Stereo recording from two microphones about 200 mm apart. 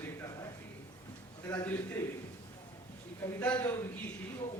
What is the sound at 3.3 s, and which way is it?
Speech, 5° left (ahead or behind).